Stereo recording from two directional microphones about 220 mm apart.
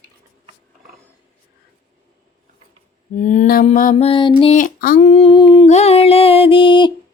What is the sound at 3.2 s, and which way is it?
Mantra, 35° left (ahead or behind).